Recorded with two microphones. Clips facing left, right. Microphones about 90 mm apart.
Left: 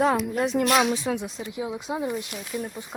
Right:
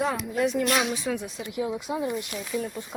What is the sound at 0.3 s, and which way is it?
Speech, 35° left (ahead or behind).